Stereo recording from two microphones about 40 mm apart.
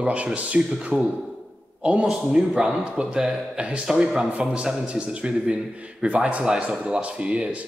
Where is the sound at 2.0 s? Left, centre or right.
Right.